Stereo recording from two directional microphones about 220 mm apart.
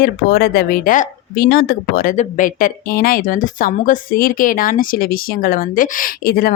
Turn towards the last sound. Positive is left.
turn(degrees=40)  # may be behind; listen again after turning